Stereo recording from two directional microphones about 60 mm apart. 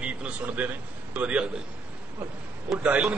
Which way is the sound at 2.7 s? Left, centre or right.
Right.